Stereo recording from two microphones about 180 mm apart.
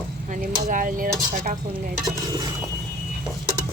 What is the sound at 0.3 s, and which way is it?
Speech, 45° right (ahead or behind).